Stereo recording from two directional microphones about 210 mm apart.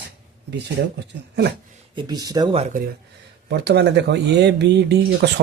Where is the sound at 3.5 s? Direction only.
55° right (ahead or behind).